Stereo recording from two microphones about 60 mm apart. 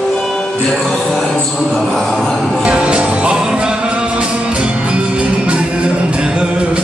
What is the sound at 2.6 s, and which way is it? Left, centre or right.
Music, centre.